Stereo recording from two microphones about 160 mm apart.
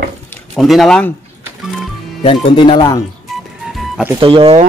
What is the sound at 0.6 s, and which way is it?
Speech, centre (ahead or behind).